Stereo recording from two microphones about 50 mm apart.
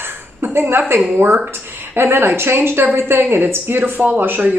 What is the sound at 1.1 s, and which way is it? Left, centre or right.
Speech, right.